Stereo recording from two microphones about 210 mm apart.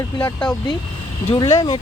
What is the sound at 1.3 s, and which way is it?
Speech, 20° left (ahead or behind).